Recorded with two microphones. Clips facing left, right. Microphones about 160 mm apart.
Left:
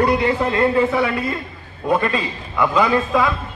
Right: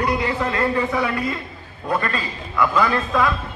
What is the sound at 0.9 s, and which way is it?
Speech, 5° left (ahead or behind).